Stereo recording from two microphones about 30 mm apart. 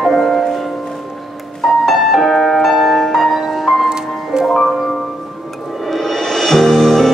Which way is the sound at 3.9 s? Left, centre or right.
Right.